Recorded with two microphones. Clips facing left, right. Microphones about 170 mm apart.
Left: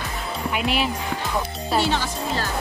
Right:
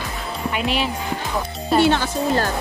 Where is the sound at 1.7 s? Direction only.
55° right (ahead or behind).